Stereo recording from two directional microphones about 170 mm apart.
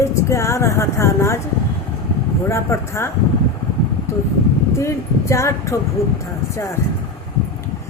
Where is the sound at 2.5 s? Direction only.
15° left (ahead or behind).